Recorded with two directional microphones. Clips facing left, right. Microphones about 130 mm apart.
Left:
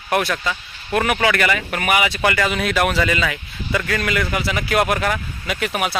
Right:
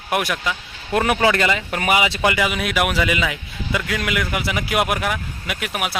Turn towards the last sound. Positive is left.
turn(degrees=-5)  # may be behind; listen again after turning